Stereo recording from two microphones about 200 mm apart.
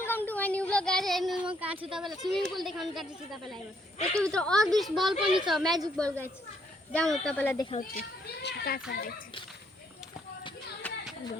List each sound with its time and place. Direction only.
0.0 s child singing: 10° left (ahead or behind); by 1.8 s 10° right (ahead or behind)
1.9 s speech: centre (ahead or behind)
6.9 s speech: 5° left (ahead or behind)
7.8 s speech: 50° left (ahead or behind)
10.8 s a sound: 5° left (ahead or behind)